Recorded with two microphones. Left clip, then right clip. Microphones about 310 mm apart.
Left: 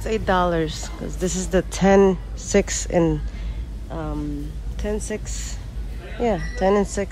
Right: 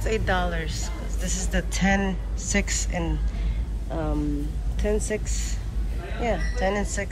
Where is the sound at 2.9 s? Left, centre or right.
Left.